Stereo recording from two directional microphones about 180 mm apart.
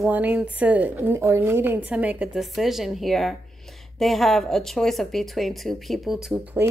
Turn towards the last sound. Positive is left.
turn(degrees=-10)  # may be behind; listen again after turning